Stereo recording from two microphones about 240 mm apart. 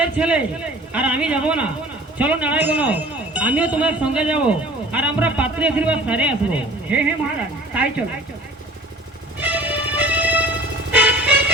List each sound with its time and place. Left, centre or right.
0.0 s speech: centre
9.4 s music: centre